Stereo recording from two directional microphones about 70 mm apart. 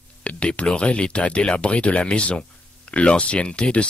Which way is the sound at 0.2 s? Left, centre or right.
Centre.